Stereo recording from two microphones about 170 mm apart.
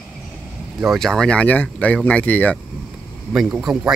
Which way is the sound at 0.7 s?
Centre (ahead or behind).